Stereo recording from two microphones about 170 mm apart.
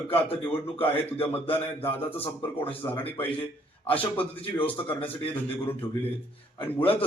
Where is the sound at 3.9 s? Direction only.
10° left (ahead or behind).